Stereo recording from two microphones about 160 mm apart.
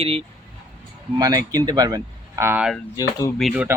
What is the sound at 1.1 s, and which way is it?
Speech, 20° right (ahead or behind).